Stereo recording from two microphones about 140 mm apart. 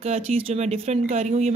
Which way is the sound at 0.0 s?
45° right (ahead or behind).